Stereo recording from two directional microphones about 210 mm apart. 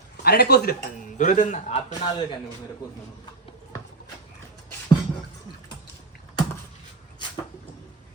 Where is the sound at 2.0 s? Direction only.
20° left (ahead or behind).